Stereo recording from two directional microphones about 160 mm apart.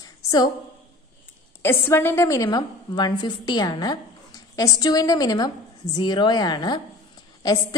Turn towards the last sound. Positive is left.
turn(degrees=25)  # may be behind; listen again after turning